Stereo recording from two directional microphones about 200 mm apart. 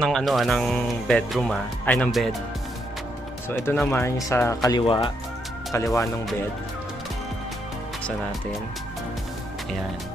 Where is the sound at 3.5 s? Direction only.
10° left (ahead or behind).